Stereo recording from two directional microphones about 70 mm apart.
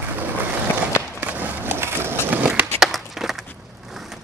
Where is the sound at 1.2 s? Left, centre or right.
Right.